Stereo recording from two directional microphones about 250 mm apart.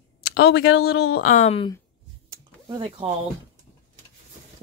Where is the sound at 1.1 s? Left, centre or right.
Left.